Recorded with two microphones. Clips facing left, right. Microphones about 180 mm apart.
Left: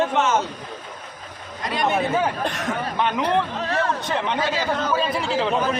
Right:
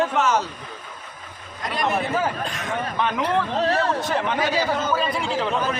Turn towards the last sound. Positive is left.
turn(degrees=0)  # may be behind; listen again after turning